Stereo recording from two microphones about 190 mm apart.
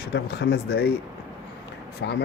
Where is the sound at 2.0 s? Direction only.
70° left (ahead or behind).